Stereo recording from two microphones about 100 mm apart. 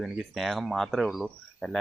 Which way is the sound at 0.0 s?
Centre (ahead or behind).